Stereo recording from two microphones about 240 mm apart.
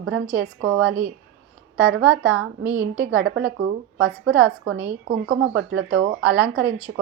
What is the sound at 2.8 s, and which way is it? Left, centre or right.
Speech, right.